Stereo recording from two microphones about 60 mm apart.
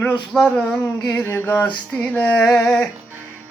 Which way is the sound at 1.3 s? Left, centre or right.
Left.